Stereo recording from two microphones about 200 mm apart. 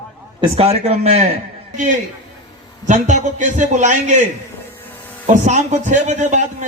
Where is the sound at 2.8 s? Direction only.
40° right (ahead or behind).